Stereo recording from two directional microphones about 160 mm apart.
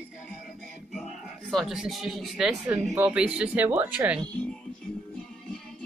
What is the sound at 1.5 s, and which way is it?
Speech, centre (ahead or behind).